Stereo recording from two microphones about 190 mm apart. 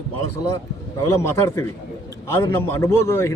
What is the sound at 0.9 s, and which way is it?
A man's voice, 15° left (ahead or behind).